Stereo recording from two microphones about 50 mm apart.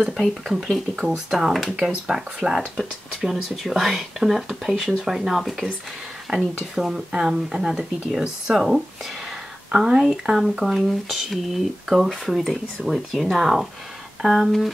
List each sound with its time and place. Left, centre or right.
0.2 s speech: centre
6.3 s speech: centre